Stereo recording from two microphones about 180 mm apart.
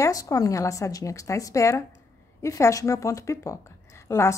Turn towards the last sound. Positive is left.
turn(degrees=15)  # may be behind; listen again after turning